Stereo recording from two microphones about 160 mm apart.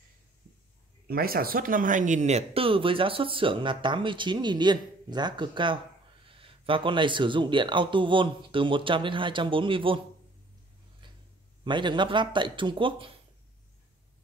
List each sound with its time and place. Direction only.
1.0 s speech: 70° right (ahead or behind); by 9.9 s 30° right (ahead or behind)
11.6 s speech: 30° right (ahead or behind)